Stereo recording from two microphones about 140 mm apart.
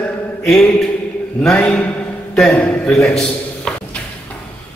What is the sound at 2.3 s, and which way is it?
A man's voice, 5° left (ahead or behind).